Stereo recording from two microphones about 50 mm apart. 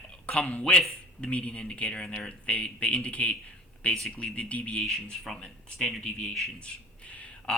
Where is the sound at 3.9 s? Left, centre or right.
Centre.